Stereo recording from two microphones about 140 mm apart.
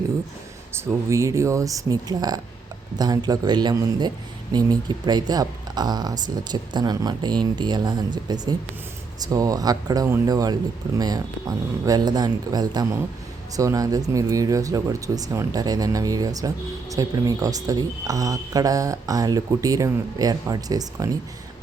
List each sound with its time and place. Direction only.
0.7 s speech: 20° right (ahead or behind)